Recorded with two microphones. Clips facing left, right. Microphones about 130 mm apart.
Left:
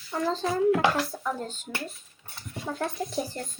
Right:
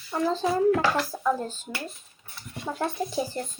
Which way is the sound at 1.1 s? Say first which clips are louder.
Right 6 dB; 25° right (ahead or behind).